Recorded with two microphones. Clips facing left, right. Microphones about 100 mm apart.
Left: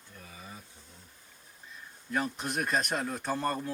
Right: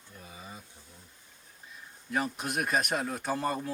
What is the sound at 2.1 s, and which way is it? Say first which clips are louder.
Speech: right 1 dB; 5° right (ahead or behind).